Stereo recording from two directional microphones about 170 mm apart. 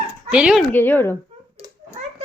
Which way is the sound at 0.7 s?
10° left (ahead or behind).